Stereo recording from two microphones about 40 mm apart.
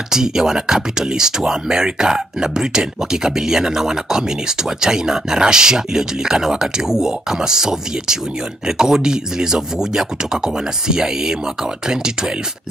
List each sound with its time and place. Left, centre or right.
0.1 s speech: centre